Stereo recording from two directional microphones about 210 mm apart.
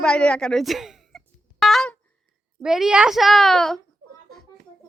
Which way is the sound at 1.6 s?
Centre (ahead or behind).